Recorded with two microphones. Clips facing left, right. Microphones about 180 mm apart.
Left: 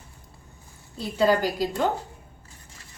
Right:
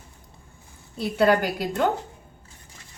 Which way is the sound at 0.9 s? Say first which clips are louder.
Right 2 dB; 65° right (ahead or behind).